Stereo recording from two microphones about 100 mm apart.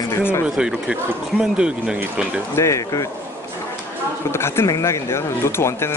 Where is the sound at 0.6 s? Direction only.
10° right (ahead or behind).